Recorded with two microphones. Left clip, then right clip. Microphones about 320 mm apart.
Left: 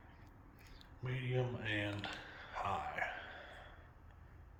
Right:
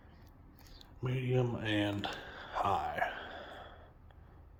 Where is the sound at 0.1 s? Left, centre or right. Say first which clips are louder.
Even; centre.